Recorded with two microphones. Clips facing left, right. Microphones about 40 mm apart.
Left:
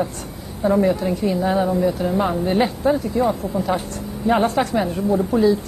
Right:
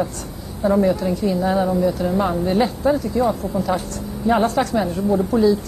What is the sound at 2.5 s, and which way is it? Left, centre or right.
Speech, left.